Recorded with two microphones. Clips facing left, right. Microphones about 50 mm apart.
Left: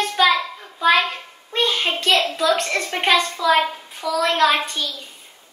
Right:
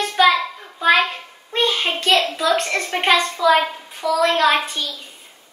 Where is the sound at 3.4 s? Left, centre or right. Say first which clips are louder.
Right 2 dB; centre.